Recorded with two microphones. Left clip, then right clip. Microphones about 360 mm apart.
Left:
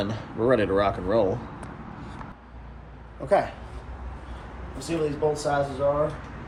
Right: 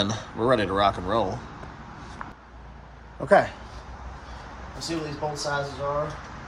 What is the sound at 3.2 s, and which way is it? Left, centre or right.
Speech, right.